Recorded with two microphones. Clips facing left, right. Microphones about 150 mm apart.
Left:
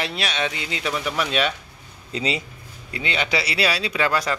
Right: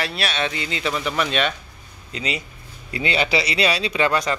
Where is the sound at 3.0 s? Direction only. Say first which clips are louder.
Right 4 dB; 35° right (ahead or behind).